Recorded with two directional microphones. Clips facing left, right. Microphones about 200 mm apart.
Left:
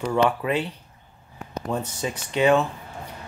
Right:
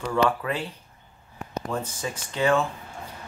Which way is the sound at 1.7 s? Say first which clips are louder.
Left 4 dB; 20° left (ahead or behind).